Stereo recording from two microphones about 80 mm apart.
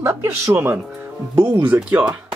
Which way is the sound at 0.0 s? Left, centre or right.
Right.